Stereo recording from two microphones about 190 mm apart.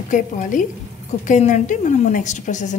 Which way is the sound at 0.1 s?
45° left (ahead or behind).